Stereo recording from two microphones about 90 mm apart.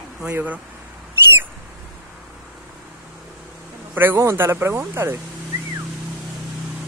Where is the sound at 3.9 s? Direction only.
25° right (ahead or behind).